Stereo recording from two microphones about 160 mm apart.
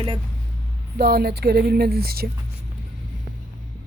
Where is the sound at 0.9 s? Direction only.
80° right.